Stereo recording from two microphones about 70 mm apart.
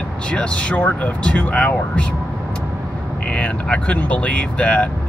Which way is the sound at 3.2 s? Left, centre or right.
Centre.